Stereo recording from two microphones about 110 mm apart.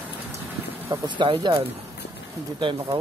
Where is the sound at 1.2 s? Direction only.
45° right (ahead or behind).